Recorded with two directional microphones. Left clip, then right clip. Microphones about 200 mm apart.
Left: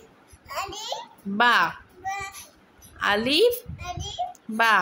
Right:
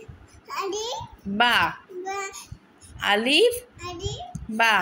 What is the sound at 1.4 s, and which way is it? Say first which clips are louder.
Speech: left 1 dB; 5° left (ahead or behind).